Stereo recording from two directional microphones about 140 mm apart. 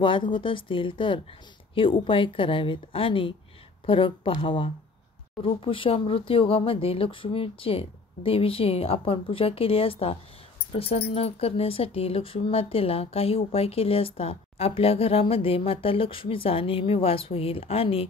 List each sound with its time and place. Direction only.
0.0 s a woman's voice: 35° left (ahead or behind)